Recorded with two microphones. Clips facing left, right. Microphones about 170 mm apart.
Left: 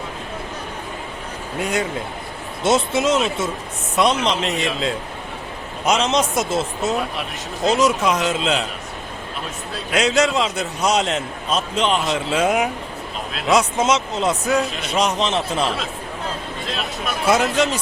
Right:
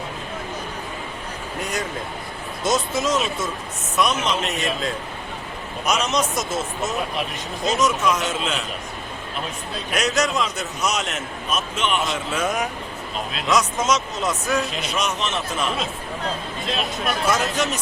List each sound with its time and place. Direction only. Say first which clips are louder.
2.6 s a man's voice: left 4 dB; 25° left (ahead or behind)
10.2 s a man's voice: left 4 dB; 25° left (ahead or behind)
16.6 s speech: right 2 dB; centre (ahead or behind)
17.2 s speech: left 6 dB; 30° left (ahead or behind)